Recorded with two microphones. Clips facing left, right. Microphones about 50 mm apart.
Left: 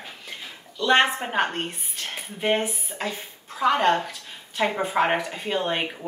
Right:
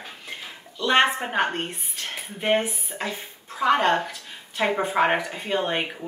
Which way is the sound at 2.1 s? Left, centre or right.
Centre.